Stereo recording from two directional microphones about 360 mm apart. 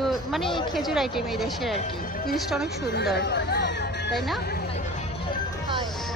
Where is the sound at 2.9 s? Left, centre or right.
Left.